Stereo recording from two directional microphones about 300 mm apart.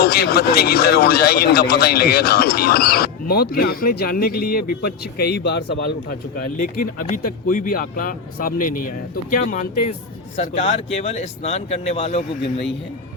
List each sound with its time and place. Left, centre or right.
0.0 s a man's voice: left